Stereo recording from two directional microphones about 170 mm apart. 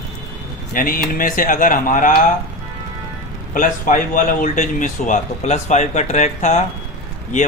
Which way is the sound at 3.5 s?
50° left (ahead or behind).